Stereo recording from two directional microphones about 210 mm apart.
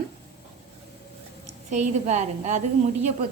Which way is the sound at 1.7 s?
35° right (ahead or behind).